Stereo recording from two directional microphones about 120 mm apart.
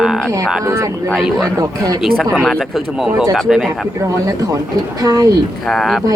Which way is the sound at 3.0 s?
5° right (ahead or behind).